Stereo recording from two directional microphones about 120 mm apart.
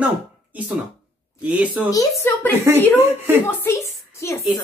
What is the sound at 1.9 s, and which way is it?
Speech, 25° left (ahead or behind).